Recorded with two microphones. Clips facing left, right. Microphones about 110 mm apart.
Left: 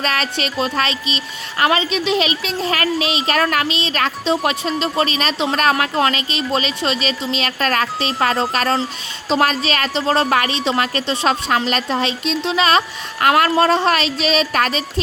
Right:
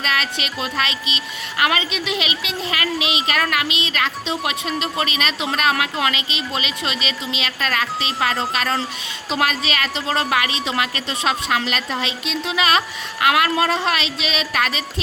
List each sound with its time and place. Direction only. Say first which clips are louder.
0.0 s a woman's voice: left 3 dB; 35° left (ahead or behind)